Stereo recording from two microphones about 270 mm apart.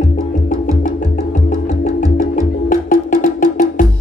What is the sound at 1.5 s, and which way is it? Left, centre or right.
Music, left.